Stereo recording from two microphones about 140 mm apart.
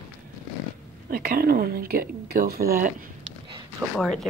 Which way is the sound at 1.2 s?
90° right.